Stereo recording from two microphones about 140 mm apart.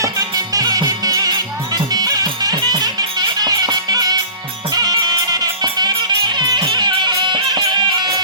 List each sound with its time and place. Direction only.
0.0 s music: 25° right (ahead or behind)